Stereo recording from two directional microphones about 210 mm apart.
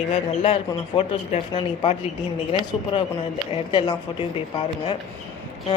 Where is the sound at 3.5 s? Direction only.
20° left (ahead or behind).